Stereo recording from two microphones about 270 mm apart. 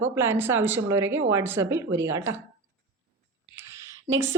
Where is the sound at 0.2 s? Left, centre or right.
Centre.